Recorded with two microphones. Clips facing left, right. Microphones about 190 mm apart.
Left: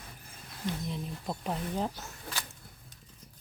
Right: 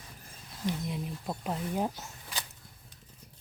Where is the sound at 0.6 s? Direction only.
10° right (ahead or behind).